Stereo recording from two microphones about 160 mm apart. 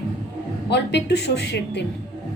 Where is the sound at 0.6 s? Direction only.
90° left.